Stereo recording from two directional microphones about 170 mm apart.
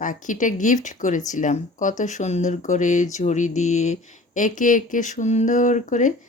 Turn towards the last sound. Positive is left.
turn(degrees=45)  # may be behind; listen again after turning